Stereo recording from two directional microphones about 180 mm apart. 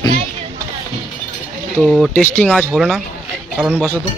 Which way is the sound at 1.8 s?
Centre (ahead or behind).